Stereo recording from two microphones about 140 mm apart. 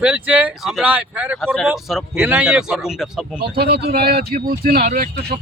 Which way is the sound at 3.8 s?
90° right.